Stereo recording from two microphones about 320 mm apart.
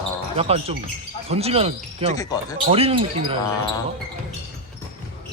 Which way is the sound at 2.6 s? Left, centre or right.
Centre.